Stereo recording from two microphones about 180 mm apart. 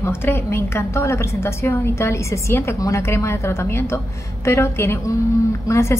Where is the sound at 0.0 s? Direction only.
15° left (ahead or behind).